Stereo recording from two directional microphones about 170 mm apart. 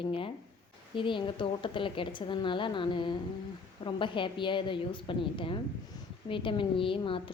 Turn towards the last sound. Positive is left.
turn(degrees=30)  # may be behind; listen again after turning